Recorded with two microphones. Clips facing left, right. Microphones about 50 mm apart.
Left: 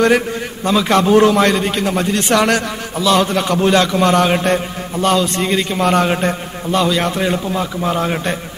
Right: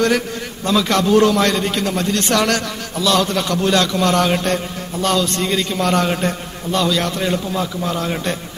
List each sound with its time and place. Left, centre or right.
0.7 s a man's voice: left